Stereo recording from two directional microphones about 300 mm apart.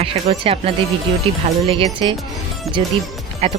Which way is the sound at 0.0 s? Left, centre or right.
Centre.